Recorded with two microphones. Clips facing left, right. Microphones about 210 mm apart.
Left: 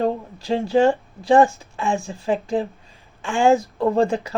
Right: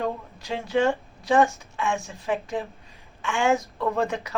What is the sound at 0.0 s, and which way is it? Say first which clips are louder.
A woman's voice: left 7 dB; 30° left (ahead or behind).